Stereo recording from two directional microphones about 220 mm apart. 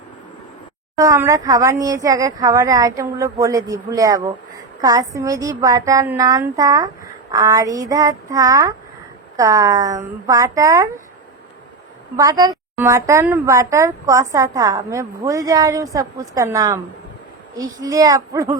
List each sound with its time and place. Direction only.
0.9 s a woman's voice: 15° right (ahead or behind)
12.1 s a woman's voice: 15° right (ahead or behind)